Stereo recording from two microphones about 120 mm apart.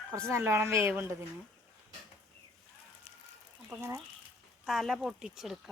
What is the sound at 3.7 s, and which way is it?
Speech, 20° right (ahead or behind).